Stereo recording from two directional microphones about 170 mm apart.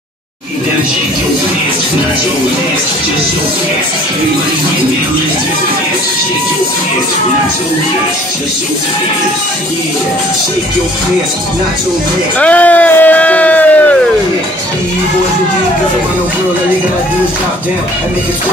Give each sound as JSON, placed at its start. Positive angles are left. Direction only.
{"t": 12.4, "sound": "speech", "side_deg": 10}